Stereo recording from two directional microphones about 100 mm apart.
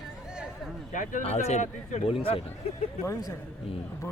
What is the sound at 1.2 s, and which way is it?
Speech, 90° left.